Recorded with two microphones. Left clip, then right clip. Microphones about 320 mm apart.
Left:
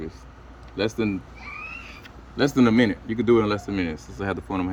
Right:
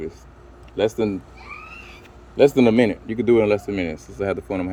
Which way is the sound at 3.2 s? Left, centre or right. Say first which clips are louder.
Right 4 dB; left.